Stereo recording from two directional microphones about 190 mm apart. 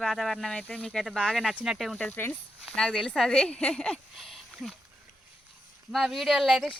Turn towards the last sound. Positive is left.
turn(degrees=0)  # may be behind; listen again after turning